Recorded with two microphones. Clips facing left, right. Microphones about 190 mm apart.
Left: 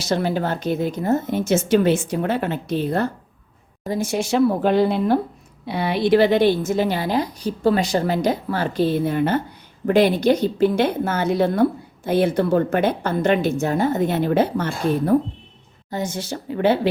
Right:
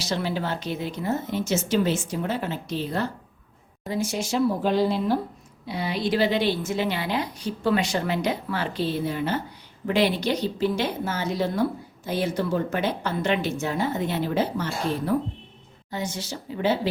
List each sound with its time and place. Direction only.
0.0 s a woman's voice: 50° left (ahead or behind)